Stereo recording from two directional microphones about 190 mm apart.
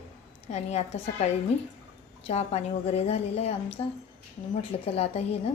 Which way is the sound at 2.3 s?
35° left (ahead or behind).